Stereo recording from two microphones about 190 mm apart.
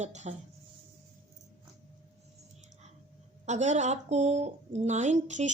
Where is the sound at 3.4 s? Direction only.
40° right (ahead or behind).